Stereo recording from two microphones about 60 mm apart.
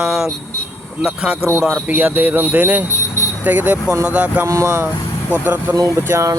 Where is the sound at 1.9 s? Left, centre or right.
Right.